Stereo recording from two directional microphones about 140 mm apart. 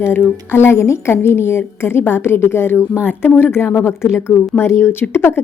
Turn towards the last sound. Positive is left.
turn(degrees=15)  # may be behind; listen again after turning